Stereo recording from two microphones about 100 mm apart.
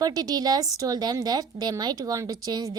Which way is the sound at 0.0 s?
40° right (ahead or behind).